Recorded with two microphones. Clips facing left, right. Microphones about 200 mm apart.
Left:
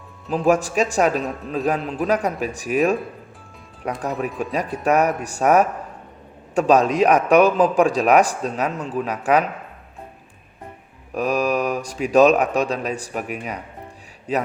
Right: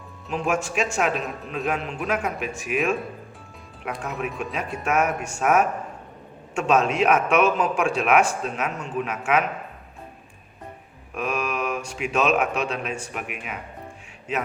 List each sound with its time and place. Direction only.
0.3 s a man's voice: 35° left (ahead or behind)
4.0 s a man's voice: 35° left (ahead or behind)
4.3 s speech: centre (ahead or behind)
4.8 s a man's voice: 35° left (ahead or behind)
11.1 s a man's voice: 35° left (ahead or behind)